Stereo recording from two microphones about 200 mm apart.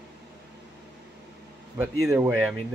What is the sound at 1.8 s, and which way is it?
Speech, 10° right (ahead or behind).